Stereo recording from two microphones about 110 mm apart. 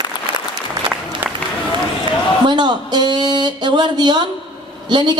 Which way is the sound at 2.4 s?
40° right (ahead or behind).